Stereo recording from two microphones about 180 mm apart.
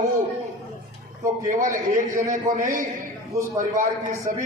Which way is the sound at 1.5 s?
45° right (ahead or behind).